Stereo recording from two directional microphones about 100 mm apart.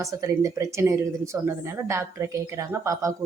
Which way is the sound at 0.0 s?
30° right (ahead or behind).